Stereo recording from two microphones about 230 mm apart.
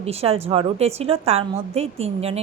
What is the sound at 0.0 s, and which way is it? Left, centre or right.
A woman's voice, right.